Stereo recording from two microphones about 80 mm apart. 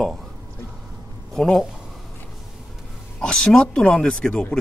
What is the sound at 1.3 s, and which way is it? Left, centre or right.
Speech, centre.